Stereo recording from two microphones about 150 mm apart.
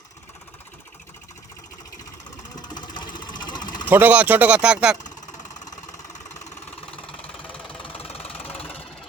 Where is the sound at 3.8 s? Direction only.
10° right (ahead or behind).